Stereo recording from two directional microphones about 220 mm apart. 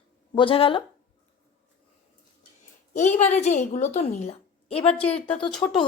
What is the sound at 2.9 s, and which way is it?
A woman's voice, 35° left (ahead or behind).